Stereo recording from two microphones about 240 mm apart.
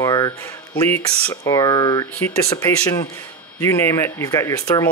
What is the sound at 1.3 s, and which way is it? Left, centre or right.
Speech, centre.